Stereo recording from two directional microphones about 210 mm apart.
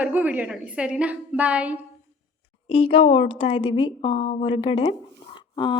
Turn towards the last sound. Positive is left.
turn(degrees=25)  # may be behind; listen again after turning